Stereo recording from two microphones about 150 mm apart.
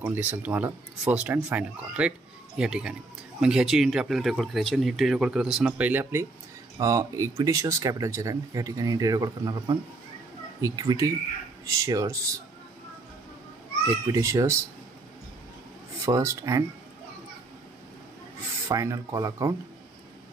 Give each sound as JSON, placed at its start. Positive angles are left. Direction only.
{"t": 0.0, "sound": "speech", "side_deg": -15}
{"t": 6.8, "sound": "speech", "side_deg": -20}
{"t": 14.0, "sound": "speech", "side_deg": -20}
{"t": 16.1, "sound": "speech", "side_deg": -20}
{"t": 18.7, "sound": "speech", "side_deg": -20}